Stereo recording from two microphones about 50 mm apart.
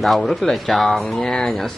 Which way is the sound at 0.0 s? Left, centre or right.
Centre.